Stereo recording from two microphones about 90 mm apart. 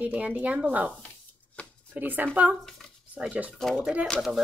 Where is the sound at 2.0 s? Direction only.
20° right (ahead or behind).